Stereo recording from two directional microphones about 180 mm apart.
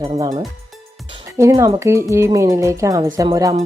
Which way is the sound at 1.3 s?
15° right (ahead or behind).